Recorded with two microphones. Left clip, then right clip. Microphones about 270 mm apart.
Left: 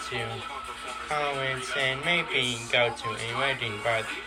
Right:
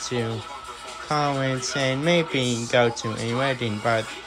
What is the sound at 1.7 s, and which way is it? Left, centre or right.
Speech, right.